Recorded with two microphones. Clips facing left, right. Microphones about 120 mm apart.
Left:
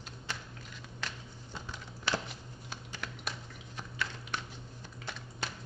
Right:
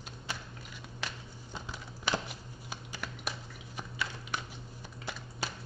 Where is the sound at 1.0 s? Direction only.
10° right (ahead or behind).